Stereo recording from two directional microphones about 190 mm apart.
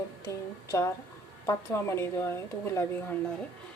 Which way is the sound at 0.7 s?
15° left (ahead or behind).